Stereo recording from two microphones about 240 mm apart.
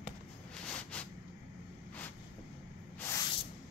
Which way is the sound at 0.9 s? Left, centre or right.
Centre.